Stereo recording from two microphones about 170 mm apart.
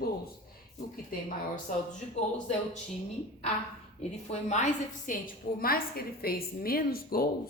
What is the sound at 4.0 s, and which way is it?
A woman's voice, 40° left (ahead or behind).